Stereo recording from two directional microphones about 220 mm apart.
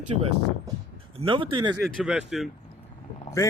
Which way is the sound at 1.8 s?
Centre (ahead or behind).